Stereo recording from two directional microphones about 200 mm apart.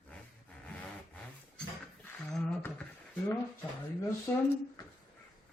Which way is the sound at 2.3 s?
5° left (ahead or behind).